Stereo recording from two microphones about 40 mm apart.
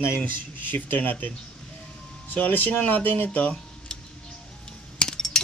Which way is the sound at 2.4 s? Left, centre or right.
Left.